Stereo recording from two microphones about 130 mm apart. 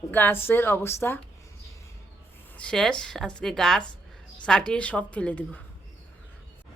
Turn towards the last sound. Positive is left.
turn(degrees=10)  # may be behind; listen again after turning